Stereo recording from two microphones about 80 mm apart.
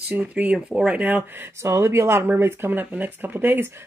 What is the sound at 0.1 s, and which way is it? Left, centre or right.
Speech, centre.